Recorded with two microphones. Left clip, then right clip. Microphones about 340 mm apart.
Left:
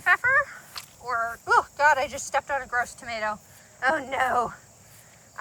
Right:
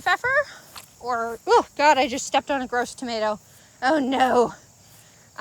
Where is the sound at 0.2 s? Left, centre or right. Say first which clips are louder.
Even; centre.